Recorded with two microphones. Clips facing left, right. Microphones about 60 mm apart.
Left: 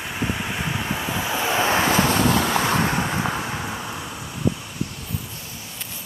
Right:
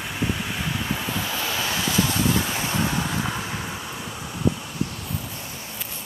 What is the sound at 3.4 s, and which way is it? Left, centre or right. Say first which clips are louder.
Vehicle: left 3 dB; centre.